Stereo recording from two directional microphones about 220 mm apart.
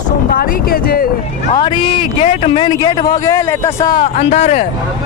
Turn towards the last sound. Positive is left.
turn(degrees=30)  # may be behind; listen again after turning